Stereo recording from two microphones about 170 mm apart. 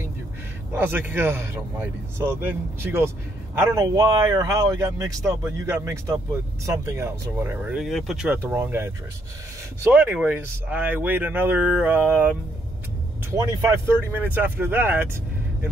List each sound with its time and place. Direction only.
0.7 s speech: 10° right (ahead or behind)
9.9 s speech: 10° right (ahead or behind)